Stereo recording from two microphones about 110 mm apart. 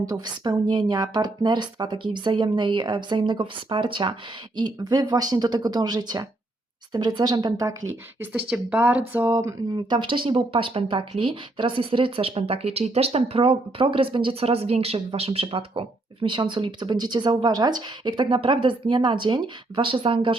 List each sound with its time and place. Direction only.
0.0 s speech: 30° right (ahead or behind)
8.2 s speech: 15° right (ahead or behind)
9.7 s speech: 45° right (ahead or behind)